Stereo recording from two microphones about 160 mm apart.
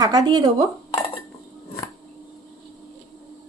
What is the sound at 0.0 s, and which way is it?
Speech, 25° right (ahead or behind).